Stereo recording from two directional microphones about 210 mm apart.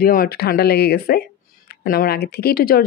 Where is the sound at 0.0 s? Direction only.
45° left (ahead or behind).